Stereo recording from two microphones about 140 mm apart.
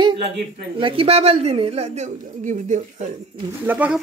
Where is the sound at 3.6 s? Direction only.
10° right (ahead or behind).